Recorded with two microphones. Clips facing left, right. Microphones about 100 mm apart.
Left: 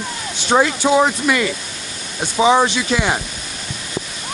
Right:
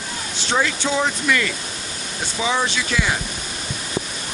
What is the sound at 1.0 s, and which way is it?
Speech, 20° left (ahead or behind).